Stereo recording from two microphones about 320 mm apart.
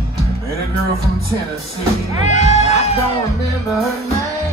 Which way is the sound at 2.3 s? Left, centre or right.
Left.